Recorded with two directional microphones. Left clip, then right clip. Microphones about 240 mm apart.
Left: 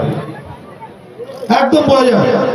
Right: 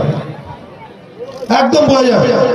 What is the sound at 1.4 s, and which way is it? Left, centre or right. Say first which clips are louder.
Speech: even; right.